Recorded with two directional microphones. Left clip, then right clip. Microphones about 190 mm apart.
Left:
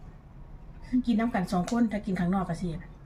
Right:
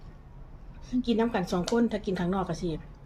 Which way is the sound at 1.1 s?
20° right (ahead or behind).